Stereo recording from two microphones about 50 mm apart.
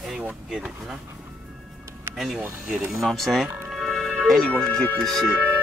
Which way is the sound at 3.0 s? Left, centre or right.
Centre.